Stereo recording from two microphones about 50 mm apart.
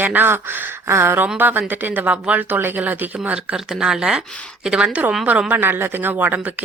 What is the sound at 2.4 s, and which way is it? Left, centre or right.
Speech, right.